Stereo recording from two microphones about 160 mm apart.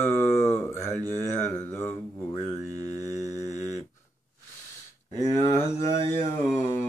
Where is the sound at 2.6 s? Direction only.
20° right (ahead or behind).